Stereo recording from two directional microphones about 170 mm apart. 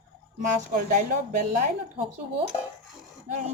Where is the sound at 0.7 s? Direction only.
50° right (ahead or behind).